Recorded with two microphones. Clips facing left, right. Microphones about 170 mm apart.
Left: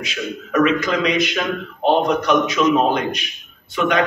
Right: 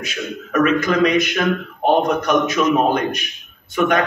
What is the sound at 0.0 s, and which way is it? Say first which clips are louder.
A man's voice: even; 50° right (ahead or behind).